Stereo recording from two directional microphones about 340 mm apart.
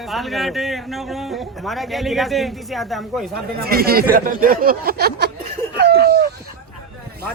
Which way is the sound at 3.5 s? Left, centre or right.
Right.